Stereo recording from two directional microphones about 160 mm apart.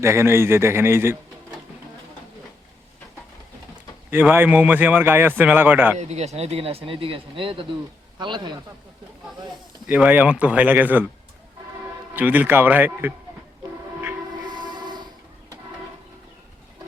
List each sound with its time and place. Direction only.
0.0 s a man's voice: 15° right (ahead or behind)
4.1 s a man's voice: 10° right (ahead or behind)
6.0 s a man's voice: 45° right (ahead or behind)
9.8 s a man's voice: 10° right (ahead or behind)
12.1 s a man's voice: 10° right (ahead or behind)
14.5 s a sound: 30° right (ahead or behind)